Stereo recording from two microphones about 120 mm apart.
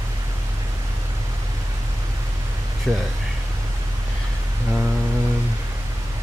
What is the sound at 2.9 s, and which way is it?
Speech, centre (ahead or behind).